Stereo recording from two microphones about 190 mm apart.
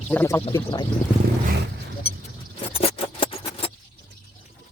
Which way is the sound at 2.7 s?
30° left (ahead or behind).